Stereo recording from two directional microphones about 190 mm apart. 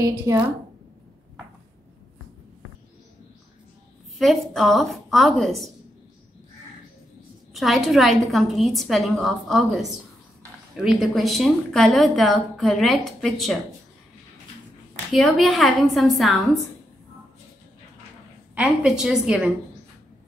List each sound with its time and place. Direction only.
0.0 s a woman's voice: 20° right (ahead or behind)
4.2 s a woman's voice: centre (ahead or behind)
7.5 s a woman's voice: centre (ahead or behind)
15.1 s a woman's voice: centre (ahead or behind)
18.5 s a woman's voice: 5° right (ahead or behind)